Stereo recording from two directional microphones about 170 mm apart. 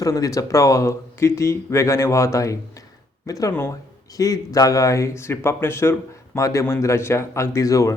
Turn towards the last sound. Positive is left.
turn(degrees=20)  # may be behind; listen again after turning